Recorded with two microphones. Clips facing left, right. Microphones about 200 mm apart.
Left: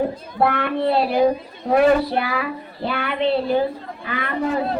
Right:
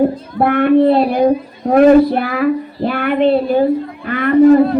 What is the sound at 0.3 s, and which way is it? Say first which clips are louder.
Speech: right 10 dB; 50° right (ahead or behind).